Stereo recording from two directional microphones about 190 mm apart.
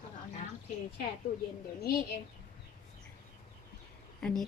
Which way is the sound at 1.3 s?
55° left (ahead or behind).